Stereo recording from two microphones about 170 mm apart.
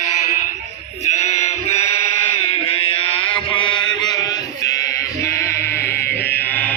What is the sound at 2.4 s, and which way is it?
Mantra, 35° left (ahead or behind).